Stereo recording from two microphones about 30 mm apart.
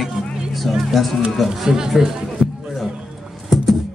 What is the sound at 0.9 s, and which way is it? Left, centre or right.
Speech, centre.